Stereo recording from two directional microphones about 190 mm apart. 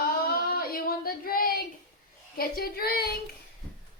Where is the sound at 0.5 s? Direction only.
50° left (ahead or behind).